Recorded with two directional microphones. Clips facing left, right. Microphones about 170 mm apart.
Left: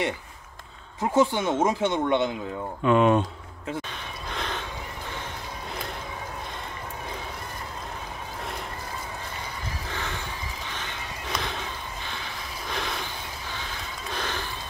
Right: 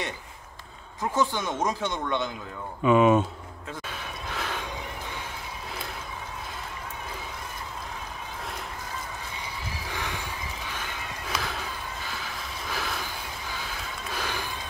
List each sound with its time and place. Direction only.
1.0 s speech: 25° left (ahead or behind)
2.8 s speech: 5° right (ahead or behind)
4.3 s a sound: 5° right (ahead or behind)
9.8 s horse: 10° right (ahead or behind)
10.7 s a sound: 10° right (ahead or behind)
14.1 s music: 10° right (ahead or behind)